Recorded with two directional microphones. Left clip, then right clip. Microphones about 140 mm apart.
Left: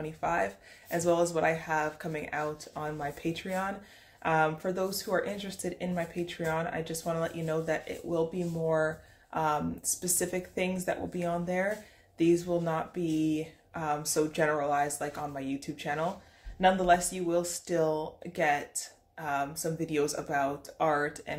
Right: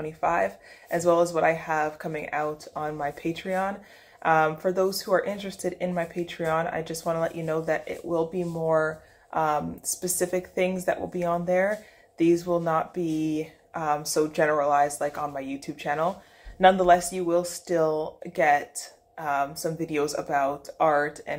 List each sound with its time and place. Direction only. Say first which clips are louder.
0.0 s speech: right 6 dB; 25° left (ahead or behind)